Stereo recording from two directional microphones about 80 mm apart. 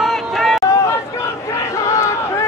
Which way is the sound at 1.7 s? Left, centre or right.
Left.